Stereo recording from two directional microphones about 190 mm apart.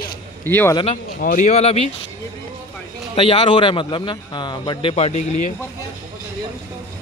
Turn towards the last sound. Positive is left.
turn(degrees=35)  # may be behind; listen again after turning